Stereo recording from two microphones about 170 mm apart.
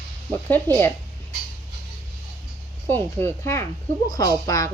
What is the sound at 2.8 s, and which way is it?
Speech, 10° left (ahead or behind).